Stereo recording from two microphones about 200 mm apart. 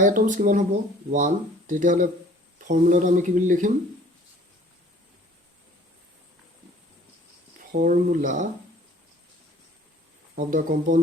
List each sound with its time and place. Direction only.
0.0 s speech: 40° right (ahead or behind)
7.7 s speech: 40° right (ahead or behind)
10.3 s speech: 40° right (ahead or behind)